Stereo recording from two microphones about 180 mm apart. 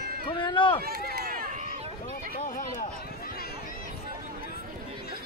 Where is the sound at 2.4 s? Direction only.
50° left (ahead or behind).